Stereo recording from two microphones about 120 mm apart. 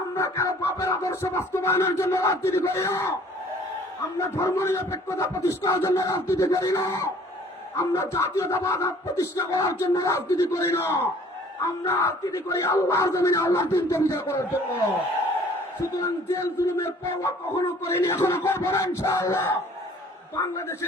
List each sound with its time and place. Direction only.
0.2 s speech: 20° left (ahead or behind)
4.2 s speech: 25° left (ahead or behind)
16.0 s speech: 20° left (ahead or behind)